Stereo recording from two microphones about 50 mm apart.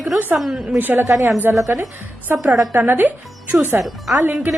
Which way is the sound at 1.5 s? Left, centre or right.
Right.